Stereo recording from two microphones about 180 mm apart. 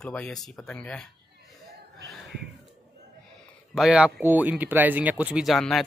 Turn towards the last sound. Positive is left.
turn(degrees=0)  # may be behind; listen again after turning